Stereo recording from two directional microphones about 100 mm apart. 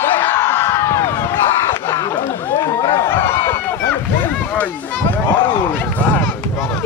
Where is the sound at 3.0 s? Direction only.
25° left (ahead or behind).